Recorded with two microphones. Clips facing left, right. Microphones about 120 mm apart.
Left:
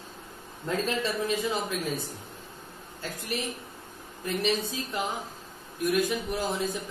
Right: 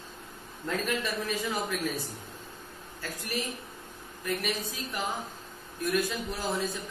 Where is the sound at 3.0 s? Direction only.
20° left (ahead or behind).